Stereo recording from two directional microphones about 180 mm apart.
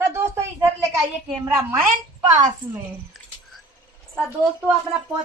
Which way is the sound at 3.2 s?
Centre (ahead or behind).